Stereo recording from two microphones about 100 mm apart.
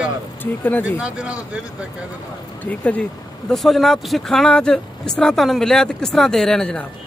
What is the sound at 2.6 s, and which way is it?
Speech, 15° left (ahead or behind).